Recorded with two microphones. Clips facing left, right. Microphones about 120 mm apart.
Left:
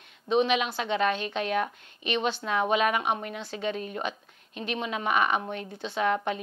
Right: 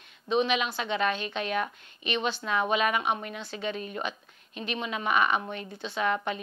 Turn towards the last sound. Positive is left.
turn(degrees=45)  # may be behind; listen again after turning